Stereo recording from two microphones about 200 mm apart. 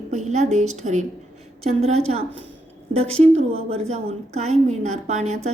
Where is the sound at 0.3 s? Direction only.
35° right (ahead or behind).